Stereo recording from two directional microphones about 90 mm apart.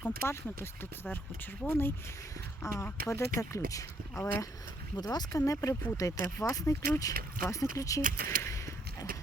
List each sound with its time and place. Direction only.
0.0 s speech: 25° left (ahead or behind)
4.9 s speech: 50° left (ahead or behind)
5.3 s speech: 35° left (ahead or behind)